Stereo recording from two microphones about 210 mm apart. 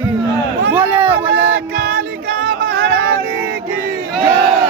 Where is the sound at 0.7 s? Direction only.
10° right (ahead or behind).